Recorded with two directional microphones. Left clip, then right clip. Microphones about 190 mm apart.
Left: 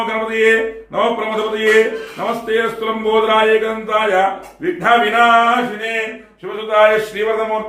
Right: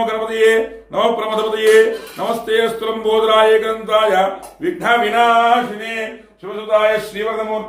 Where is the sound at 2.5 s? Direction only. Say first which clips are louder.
Right 1 dB; 35° right (ahead or behind).